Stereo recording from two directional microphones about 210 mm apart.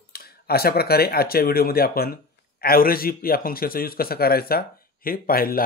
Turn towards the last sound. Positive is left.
turn(degrees=45)  # may be behind; listen again after turning